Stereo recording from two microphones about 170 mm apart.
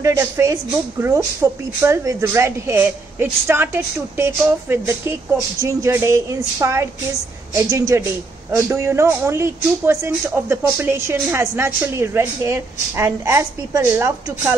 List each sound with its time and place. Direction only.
0.0 s a woman's voice: 20° right (ahead or behind)